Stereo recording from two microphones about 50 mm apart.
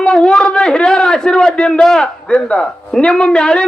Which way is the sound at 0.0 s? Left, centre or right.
Centre.